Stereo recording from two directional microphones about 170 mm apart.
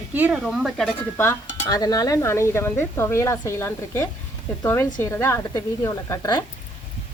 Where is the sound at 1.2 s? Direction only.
15° left (ahead or behind).